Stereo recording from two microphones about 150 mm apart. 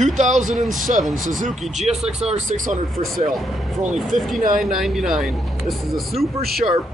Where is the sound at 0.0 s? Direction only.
50° right (ahead or behind).